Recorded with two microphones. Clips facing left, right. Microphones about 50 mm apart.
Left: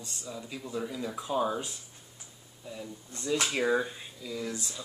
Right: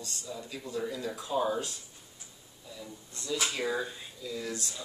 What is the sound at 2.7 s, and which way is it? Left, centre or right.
Speech, left.